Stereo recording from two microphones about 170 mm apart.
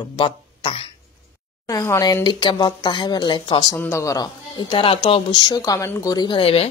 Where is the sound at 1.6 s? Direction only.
20° left (ahead or behind).